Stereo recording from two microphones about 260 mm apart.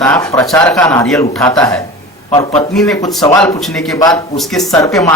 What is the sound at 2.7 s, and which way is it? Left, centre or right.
Speech, centre.